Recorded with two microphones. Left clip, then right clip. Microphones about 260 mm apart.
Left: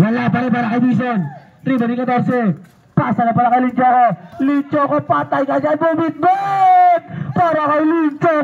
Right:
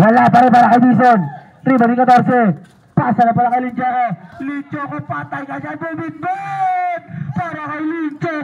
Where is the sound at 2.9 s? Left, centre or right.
Centre.